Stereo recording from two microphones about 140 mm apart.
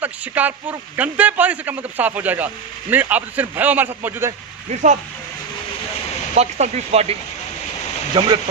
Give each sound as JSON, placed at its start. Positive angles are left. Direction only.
{"t": 0.0, "sound": "a man's voice", "side_deg": -10}
{"t": 4.7, "sound": "speech", "side_deg": -60}
{"t": 6.3, "sound": "speech", "side_deg": -55}
{"t": 8.2, "sound": "speech", "side_deg": -35}